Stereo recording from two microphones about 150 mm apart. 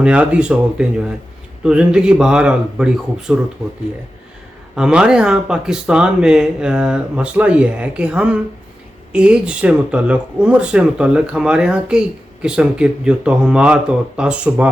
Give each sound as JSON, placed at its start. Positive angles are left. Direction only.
{"t": 0.0, "sound": "speech", "side_deg": -10}
{"t": 4.7, "sound": "speech", "side_deg": -5}